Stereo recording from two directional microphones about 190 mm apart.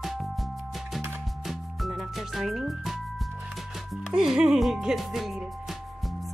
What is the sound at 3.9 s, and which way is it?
Speech, 5° right (ahead or behind).